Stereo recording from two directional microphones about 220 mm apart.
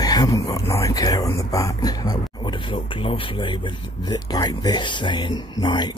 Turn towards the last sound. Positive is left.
turn(degrees=20)  # may be behind; listen again after turning